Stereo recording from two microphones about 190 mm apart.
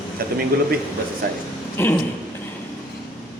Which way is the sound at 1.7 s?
10° left (ahead or behind).